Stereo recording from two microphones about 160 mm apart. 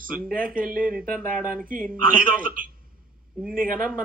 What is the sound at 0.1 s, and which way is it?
Speech, 60° right (ahead or behind).